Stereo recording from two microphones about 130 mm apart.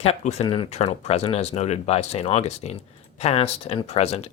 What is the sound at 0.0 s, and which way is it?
Speech, 55° left (ahead or behind).